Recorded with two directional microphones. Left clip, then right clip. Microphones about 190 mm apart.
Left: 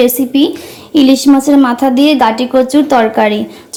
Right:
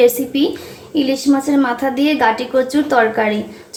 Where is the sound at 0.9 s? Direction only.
35° left (ahead or behind).